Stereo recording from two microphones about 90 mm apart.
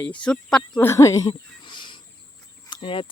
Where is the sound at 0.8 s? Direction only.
30° left (ahead or behind).